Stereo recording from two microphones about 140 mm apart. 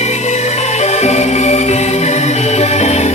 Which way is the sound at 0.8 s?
55° left (ahead or behind).